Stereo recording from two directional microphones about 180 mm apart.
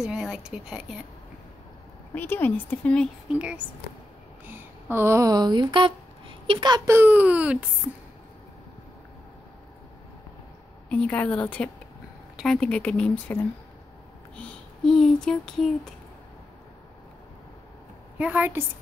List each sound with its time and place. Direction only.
0.0 s a woman's voice: 5° right (ahead or behind)
2.1 s a woman's voice: 10° left (ahead or behind)
3.3 s speech: 5° right (ahead or behind); by 7.0 s 25° right (ahead or behind)
7.0 s speech: 10° right (ahead or behind)
10.9 s a woman's voice: 10° left (ahead or behind)
18.1 s a woman's voice: 10° right (ahead or behind)